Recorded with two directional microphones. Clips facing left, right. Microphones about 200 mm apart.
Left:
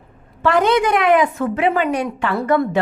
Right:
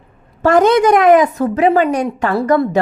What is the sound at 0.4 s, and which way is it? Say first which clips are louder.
A woman's voice: right 5 dB; 45° right (ahead or behind).